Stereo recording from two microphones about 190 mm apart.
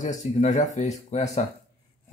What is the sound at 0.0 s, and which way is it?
Speech, 40° left (ahead or behind).